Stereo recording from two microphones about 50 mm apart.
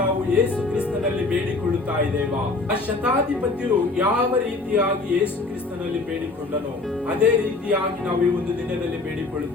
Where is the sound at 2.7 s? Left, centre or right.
Right.